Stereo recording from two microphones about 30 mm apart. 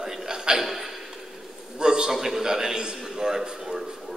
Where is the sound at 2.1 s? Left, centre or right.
Centre.